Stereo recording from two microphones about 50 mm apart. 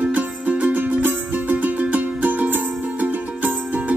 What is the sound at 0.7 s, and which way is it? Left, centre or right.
Music, right.